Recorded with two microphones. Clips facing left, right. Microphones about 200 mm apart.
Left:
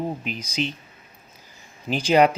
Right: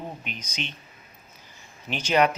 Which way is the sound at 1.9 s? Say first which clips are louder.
Left 5 dB; 35° left (ahead or behind).